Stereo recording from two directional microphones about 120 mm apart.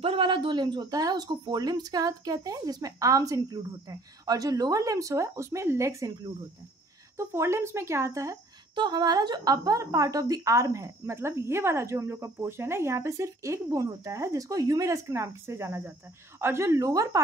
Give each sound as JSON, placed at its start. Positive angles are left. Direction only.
{"t": 0.0, "sound": "speech", "side_deg": -45}
{"t": 7.2, "sound": "a woman's voice", "side_deg": -25}